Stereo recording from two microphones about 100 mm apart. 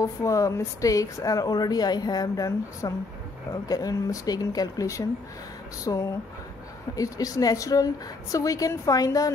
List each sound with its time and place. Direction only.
0.0 s speech: 35° left (ahead or behind)